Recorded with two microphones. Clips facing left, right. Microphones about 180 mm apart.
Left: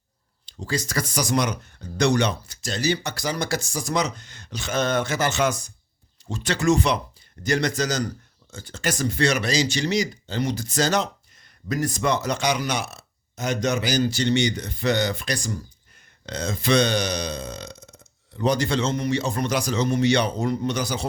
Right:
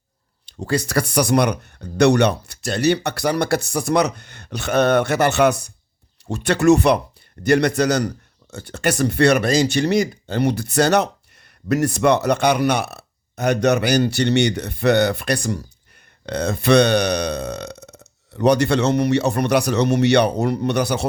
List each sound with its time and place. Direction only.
0.6 s speech: 65° right (ahead or behind)